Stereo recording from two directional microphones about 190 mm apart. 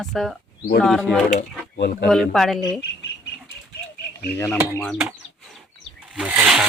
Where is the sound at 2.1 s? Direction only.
Centre (ahead or behind).